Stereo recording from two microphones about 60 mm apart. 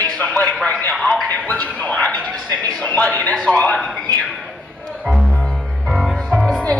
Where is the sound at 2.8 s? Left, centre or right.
Left.